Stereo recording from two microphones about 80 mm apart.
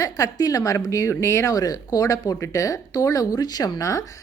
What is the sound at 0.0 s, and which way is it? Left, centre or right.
A woman's voice, left.